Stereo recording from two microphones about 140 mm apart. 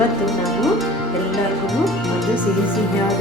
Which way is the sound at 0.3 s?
Centre (ahead or behind).